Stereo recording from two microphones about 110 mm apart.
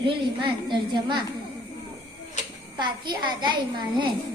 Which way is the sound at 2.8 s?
45° right (ahead or behind).